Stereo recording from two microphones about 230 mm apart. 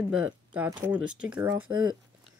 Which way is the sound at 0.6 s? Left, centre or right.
Centre.